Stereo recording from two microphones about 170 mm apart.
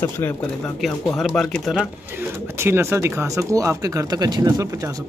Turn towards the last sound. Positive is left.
turn(degrees=-20)  # may be behind; listen again after turning